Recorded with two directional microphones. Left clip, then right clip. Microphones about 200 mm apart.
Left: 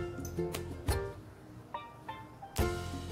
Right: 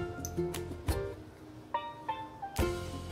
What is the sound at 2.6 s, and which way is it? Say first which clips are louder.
Music: right 1 dB; centre (ahead or behind).